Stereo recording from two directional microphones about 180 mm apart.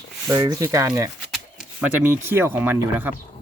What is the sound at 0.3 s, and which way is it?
Speech, 20° right (ahead or behind).